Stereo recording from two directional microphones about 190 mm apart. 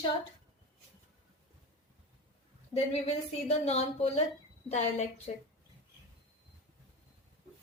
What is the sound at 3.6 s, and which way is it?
Speech, 35° left (ahead or behind).